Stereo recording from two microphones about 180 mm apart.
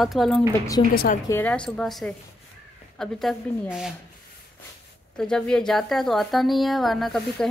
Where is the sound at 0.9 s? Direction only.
55° left (ahead or behind).